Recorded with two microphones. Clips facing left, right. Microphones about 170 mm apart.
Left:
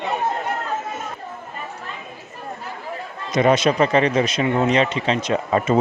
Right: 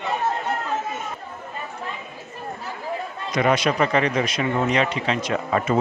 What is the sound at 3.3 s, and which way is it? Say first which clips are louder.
A man's voice: left 4 dB; 25° left (ahead or behind).